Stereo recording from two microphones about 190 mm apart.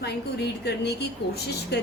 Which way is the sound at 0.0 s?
60° left (ahead or behind).